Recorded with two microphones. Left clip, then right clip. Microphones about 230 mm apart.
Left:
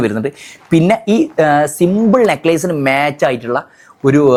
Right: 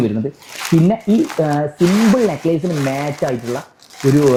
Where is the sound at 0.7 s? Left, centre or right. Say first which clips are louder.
Left 4 dB; left.